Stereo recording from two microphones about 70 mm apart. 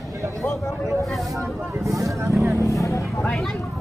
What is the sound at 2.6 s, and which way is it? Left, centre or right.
Vehicle, left.